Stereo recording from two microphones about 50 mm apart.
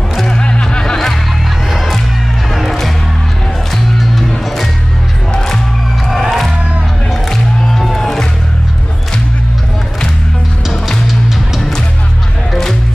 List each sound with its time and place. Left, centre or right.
0.3 s music: centre
1.7 s music: centre
6.0 s music: centre